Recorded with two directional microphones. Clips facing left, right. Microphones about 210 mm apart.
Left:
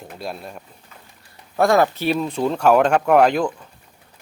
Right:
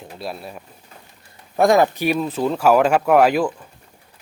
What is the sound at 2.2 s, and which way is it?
Speech, centre (ahead or behind).